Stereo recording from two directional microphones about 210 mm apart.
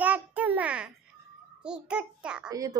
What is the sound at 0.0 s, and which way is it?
Babbling, 5° right (ahead or behind).